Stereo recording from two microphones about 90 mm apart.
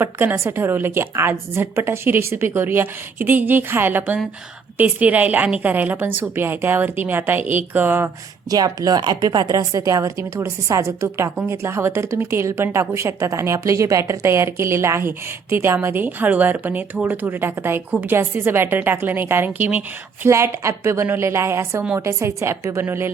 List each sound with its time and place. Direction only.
0.0 s speech: 25° right (ahead or behind)
8.4 s a woman's voice: 45° right (ahead or behind); by 19.8 s 20° right (ahead or behind)
20.2 s a woman's voice: 30° right (ahead or behind)